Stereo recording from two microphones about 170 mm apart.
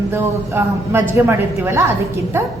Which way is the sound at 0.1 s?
15° right (ahead or behind).